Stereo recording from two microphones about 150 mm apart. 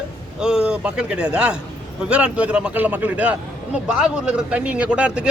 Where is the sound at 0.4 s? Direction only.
5° right (ahead or behind).